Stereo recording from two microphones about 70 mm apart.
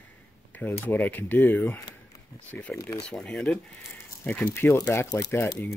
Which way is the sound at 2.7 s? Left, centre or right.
Centre.